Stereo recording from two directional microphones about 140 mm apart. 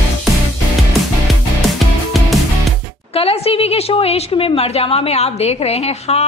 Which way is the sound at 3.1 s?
45° left (ahead or behind).